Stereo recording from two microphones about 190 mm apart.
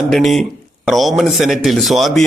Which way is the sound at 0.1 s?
Centre (ahead or behind).